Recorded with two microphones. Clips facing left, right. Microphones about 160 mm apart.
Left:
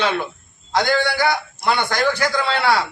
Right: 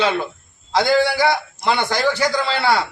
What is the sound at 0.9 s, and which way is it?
Speech, 30° right (ahead or behind).